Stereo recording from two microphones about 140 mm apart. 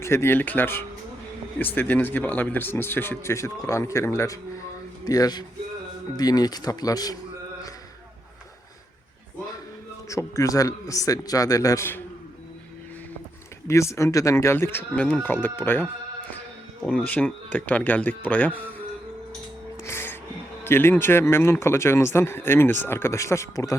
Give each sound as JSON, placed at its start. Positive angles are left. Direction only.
{"t": 0.0, "sound": "a man's voice", "side_deg": 20}
{"t": 10.1, "sound": "a man's voice", "side_deg": 20}
{"t": 13.7, "sound": "speech", "side_deg": 20}
{"t": 19.8, "sound": "music", "side_deg": 15}
{"t": 20.7, "sound": "speech", "side_deg": 15}